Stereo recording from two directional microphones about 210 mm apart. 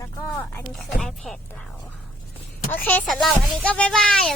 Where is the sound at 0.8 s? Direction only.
Centre (ahead or behind).